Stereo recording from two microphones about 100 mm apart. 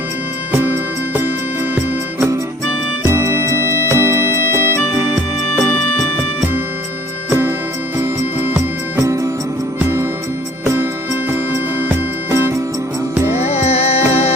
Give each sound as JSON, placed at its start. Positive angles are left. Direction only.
{"t": 3.1, "sound": "music", "side_deg": -25}
{"t": 5.1, "sound": "music", "side_deg": 0}
{"t": 7.3, "sound": "music", "side_deg": -25}
{"t": 11.8, "sound": "music", "side_deg": -25}
{"t": 13.4, "sound": "music", "side_deg": 90}